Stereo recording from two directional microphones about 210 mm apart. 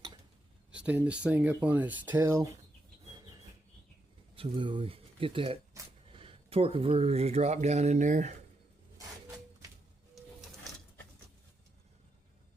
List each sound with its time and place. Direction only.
0.7 s speech: 5° right (ahead or behind)
4.4 s speech: 25° right (ahead or behind)
9.0 s a sound: 15° right (ahead or behind)